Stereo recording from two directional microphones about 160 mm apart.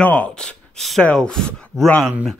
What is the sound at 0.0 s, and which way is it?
Speech, 10° left (ahead or behind).